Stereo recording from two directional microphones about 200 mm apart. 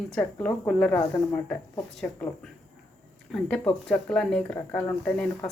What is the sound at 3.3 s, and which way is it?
Speech, 5° left (ahead or behind).